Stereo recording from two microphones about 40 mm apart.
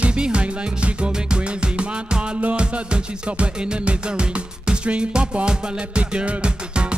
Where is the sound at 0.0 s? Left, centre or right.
Right.